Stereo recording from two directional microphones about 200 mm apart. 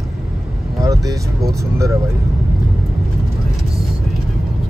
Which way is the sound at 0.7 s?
15° right (ahead or behind).